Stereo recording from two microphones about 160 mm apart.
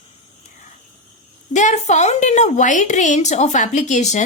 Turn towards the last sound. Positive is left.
turn(degrees=45)  # may be behind; listen again after turning